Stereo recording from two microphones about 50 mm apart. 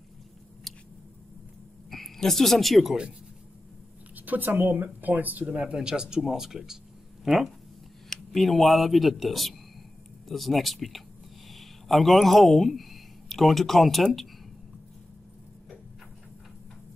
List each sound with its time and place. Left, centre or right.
0.7 s a sound: centre
1.9 s speech: centre
4.1 s a woman's voice: right
5.6 s speech: centre
8.1 s speech: centre